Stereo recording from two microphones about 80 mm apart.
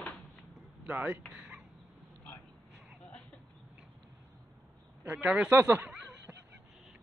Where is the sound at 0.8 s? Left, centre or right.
Centre.